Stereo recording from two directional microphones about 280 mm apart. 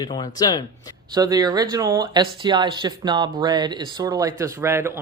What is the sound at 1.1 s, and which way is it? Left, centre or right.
Speech, centre.